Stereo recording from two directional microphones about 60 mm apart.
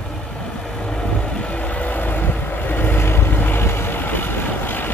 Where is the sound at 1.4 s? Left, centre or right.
Left.